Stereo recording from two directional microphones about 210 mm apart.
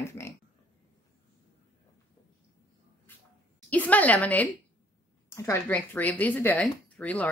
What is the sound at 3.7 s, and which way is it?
Speech, 5° left (ahead or behind).